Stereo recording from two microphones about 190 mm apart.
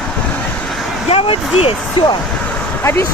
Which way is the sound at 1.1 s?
30° left (ahead or behind).